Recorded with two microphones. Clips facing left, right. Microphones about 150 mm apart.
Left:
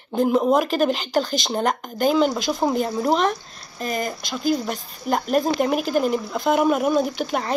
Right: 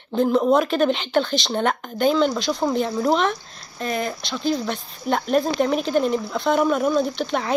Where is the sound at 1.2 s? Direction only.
45° left (ahead or behind).